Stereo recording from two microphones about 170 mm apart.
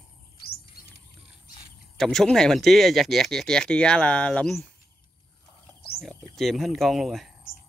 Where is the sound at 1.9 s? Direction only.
Centre (ahead or behind).